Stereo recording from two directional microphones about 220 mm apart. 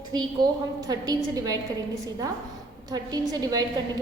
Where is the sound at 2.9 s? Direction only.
15° right (ahead or behind).